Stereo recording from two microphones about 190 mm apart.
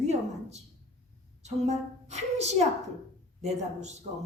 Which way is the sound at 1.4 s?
35° right (ahead or behind).